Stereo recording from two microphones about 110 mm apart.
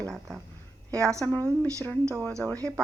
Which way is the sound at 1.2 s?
15° left (ahead or behind).